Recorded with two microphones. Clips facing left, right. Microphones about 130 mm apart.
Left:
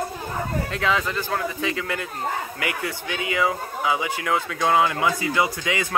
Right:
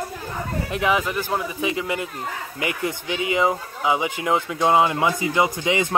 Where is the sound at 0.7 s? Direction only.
15° right (ahead or behind).